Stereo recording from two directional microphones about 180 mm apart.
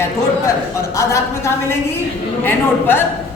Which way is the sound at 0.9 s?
15° left (ahead or behind).